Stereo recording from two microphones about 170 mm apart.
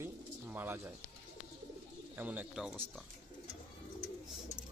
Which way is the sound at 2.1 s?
10° right (ahead or behind).